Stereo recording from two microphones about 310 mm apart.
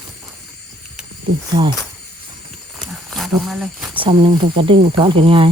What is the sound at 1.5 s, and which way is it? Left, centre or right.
Speech, centre.